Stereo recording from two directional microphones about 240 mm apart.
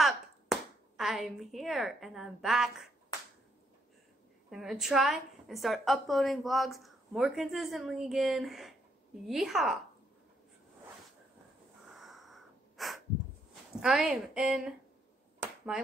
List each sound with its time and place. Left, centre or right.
0.0 s a sound: centre
4.5 s a woman's voice: centre
11.9 s breathing: centre
13.7 s a woman's voice: centre